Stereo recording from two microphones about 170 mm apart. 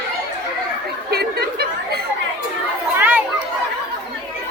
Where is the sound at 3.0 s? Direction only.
10° right (ahead or behind).